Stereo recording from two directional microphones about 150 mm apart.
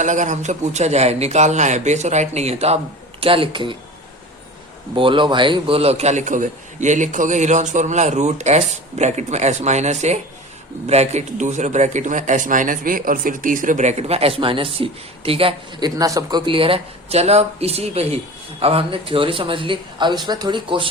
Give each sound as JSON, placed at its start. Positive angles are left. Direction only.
{"t": 0.0, "sound": "a man's voice", "side_deg": -55}
{"t": 4.9, "sound": "a man's voice", "side_deg": -35}
{"t": 16.0, "sound": "a man's voice", "side_deg": -25}
{"t": 16.5, "sound": "a man's voice", "side_deg": -35}